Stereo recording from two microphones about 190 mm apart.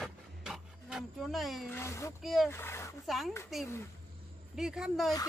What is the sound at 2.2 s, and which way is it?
Music, centre (ahead or behind).